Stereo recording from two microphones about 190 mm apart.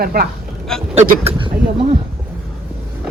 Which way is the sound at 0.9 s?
35° right (ahead or behind).